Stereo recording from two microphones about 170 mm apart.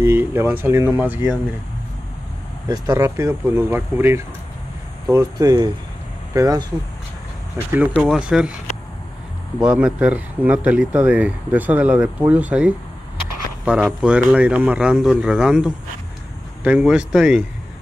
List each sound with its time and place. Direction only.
0.0 s speech: 10° right (ahead or behind)
2.7 s speech: 15° right (ahead or behind)
9.6 s speech: 5° right (ahead or behind)